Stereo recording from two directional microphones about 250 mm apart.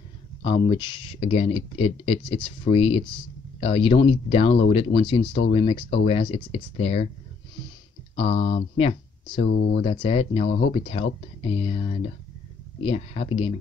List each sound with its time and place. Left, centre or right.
0.4 s speech: centre
8.3 s speech: left
8.7 s speech: left